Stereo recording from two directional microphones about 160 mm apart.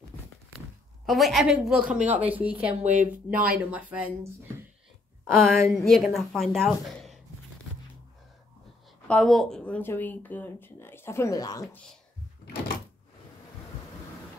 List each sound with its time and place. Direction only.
1.0 s a woman's voice: centre (ahead or behind)
2.8 s speech: 50° right (ahead or behind)
3.4 s speech: 10° right (ahead or behind)
5.3 s a woman's voice: centre (ahead or behind)
9.0 s speech: 5° left (ahead or behind); by 11.7 s 20° left (ahead or behind)